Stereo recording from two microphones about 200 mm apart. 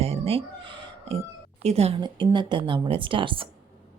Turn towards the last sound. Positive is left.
turn(degrees=-25)  # may be behind; listen again after turning